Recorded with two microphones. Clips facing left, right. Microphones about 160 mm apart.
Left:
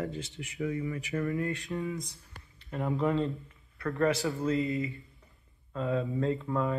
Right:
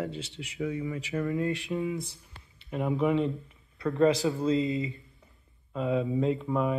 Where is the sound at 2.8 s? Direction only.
5° right (ahead or behind).